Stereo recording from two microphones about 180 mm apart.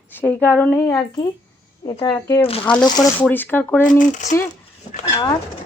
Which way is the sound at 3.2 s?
10° left (ahead or behind).